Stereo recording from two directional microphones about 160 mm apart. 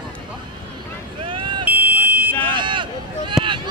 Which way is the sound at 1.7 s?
10° right (ahead or behind).